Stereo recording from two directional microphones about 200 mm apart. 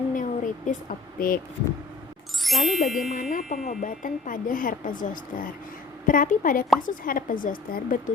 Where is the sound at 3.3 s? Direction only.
40° left (ahead or behind).